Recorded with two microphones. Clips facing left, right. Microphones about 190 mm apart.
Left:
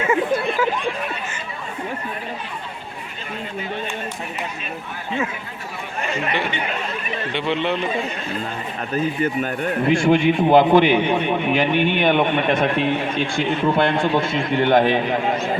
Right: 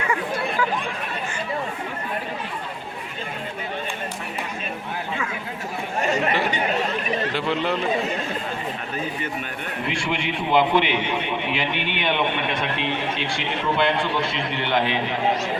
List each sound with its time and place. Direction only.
6.0 s chatter: 40° right (ahead or behind)
6.5 s speech: 40° right (ahead or behind)
7.3 s speech: centre (ahead or behind)
9.2 s a man's voice: 45° left (ahead or behind)